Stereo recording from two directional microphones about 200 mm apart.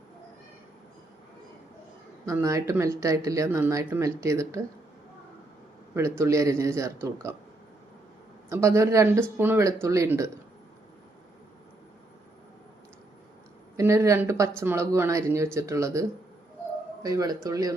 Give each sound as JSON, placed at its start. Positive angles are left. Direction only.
{"t": 2.2, "sound": "speech", "side_deg": -15}
{"t": 5.9, "sound": "speech", "side_deg": -15}
{"t": 8.4, "sound": "speech", "side_deg": -15}
{"t": 13.7, "sound": "speech", "side_deg": -15}